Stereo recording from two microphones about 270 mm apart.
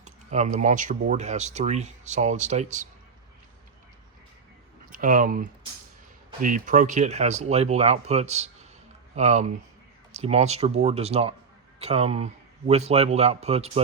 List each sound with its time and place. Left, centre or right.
0.0 s speech: right
4.9 s speech: right